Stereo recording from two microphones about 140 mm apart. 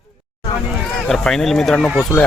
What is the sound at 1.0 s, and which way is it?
Speech, 5° left (ahead or behind).